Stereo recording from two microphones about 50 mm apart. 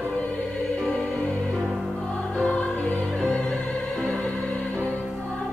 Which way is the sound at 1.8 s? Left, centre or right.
Centre.